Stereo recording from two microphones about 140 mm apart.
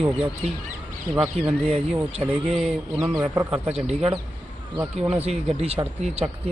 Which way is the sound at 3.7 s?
50° right (ahead or behind).